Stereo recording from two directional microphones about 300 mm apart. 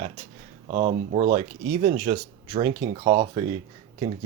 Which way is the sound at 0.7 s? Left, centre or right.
Centre.